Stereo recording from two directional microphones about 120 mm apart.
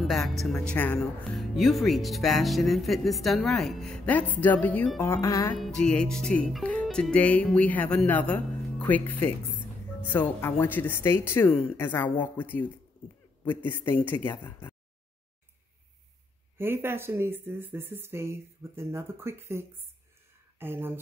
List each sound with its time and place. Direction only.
0.0 s speech: centre (ahead or behind); by 5.5 s 25° left (ahead or behind)
5.6 s speech: 5° left (ahead or behind)
13.8 s speech: 15° left (ahead or behind)
16.5 s speech: 20° right (ahead or behind)